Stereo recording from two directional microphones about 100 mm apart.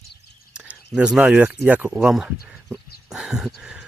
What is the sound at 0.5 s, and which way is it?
Speech, 10° right (ahead or behind).